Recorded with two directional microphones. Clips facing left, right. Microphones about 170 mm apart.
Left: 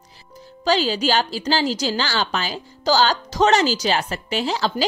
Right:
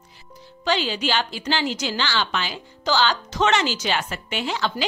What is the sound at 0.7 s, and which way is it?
A woman's voice, 35° left (ahead or behind).